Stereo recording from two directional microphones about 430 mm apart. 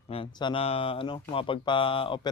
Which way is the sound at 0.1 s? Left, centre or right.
Centre.